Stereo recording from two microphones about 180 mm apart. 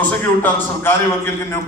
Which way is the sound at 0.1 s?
10° left (ahead or behind).